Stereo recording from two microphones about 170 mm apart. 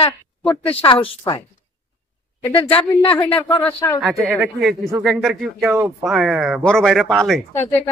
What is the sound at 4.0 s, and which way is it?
Speech, centre (ahead or behind).